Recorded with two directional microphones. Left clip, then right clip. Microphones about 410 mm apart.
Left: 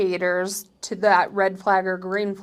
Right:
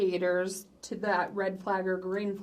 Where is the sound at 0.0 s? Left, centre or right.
Left.